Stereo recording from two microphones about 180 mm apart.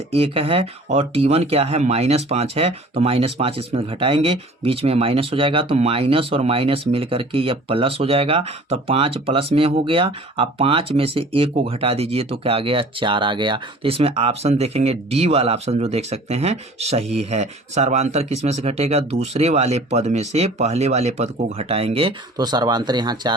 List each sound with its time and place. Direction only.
0.1 s speech: 30° right (ahead or behind)